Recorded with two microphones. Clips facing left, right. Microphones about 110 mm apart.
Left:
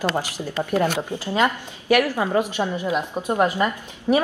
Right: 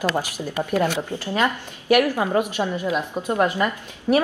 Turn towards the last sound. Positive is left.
turn(degrees=20)  # may be behind; listen again after turning